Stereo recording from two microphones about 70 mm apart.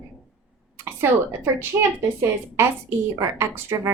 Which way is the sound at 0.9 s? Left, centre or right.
Right.